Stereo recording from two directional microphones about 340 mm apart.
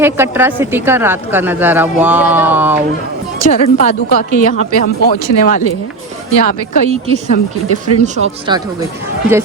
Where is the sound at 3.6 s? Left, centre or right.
Left.